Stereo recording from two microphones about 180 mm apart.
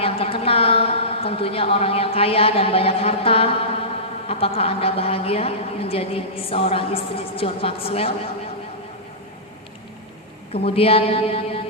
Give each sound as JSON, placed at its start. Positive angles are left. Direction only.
{"t": 0.0, "sound": "a woman's voice", "side_deg": 30}
{"t": 10.5, "sound": "a woman's voice", "side_deg": 35}